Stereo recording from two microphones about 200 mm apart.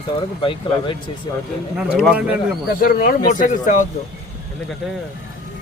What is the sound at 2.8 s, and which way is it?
Speech, 45° left (ahead or behind).